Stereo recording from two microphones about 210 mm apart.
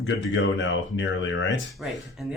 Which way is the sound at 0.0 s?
60° left (ahead or behind).